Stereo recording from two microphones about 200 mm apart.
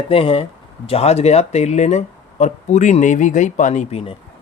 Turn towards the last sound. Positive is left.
turn(degrees=30)  # may be behind; listen again after turning